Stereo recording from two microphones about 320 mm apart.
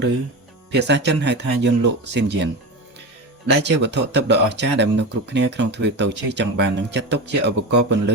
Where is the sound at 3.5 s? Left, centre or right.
Right.